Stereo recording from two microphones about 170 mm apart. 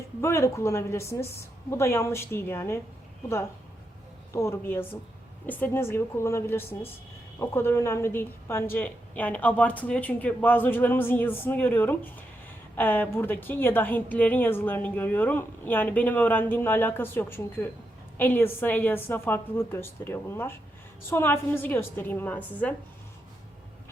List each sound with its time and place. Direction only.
0.2 s a woman's voice: 15° left (ahead or behind)
4.3 s a woman's voice: 15° left (ahead or behind)